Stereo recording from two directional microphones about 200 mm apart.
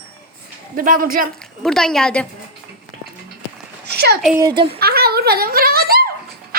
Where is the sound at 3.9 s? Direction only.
55° right (ahead or behind).